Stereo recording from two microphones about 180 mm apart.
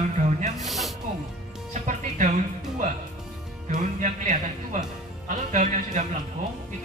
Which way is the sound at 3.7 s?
45° right (ahead or behind).